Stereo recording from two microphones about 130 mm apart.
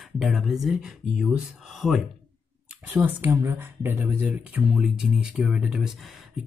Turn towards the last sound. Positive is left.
turn(degrees=-5)  # may be behind; listen again after turning